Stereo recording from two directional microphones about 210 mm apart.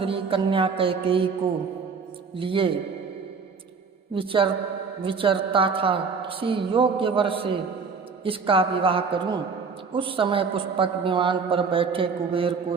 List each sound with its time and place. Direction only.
0.0 s a man's voice: 25° right (ahead or behind)
2.3 s a man's voice: 25° right (ahead or behind)
4.1 s a man's voice: 25° right (ahead or behind)